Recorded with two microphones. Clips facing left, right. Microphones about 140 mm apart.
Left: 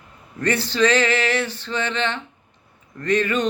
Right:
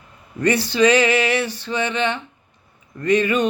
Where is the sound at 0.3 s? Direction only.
10° right (ahead or behind).